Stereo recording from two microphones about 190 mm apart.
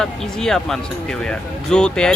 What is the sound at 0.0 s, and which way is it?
Speech, 5° left (ahead or behind).